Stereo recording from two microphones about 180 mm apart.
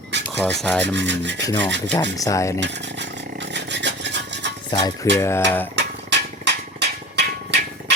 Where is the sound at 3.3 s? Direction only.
75° right (ahead or behind).